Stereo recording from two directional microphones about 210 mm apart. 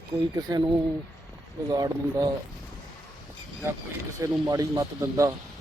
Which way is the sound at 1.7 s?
15° right (ahead or behind).